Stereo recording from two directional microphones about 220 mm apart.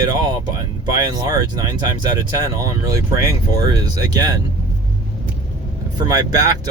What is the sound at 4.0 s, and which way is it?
Speech, 15° right (ahead or behind).